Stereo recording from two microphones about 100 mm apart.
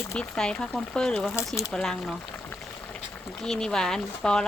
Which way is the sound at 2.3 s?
20° left (ahead or behind).